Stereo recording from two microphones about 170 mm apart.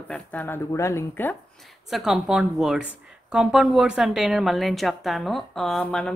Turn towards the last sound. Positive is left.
turn(degrees=5)  # may be behind; listen again after turning